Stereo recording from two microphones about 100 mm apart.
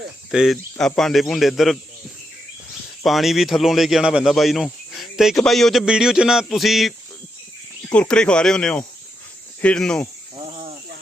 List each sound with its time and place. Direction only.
0.3 s speech: 5° right (ahead or behind)
3.0 s speech: centre (ahead or behind)
7.9 s speech: 10° left (ahead or behind)
10.3 s cricket: 60° right (ahead or behind)